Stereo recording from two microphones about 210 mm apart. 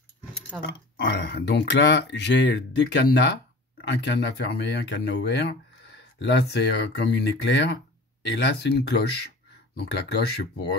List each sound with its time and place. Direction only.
0.5 s speech: 10° right (ahead or behind)
0.9 s speech: 50° left (ahead or behind)